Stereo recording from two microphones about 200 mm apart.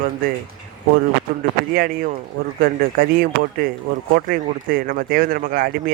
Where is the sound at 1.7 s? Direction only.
45° right (ahead or behind).